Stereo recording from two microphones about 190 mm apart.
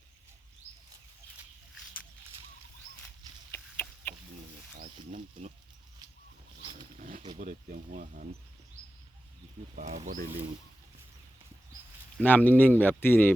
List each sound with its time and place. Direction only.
3.5 s a sound: 10° left (ahead or behind)
4.8 s snake: 40° right (ahead or behind)
6.6 s roaring cats: 30° right (ahead or behind)
7.0 s speech: 40° right (ahead or behind)
9.7 s speech: 40° right (ahead or behind)
12.2 s speech: 10° left (ahead or behind)